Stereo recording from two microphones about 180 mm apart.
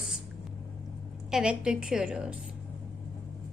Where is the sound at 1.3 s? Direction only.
5° right (ahead or behind).